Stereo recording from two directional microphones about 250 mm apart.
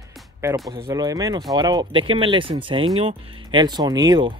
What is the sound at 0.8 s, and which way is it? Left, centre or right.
Speech, centre.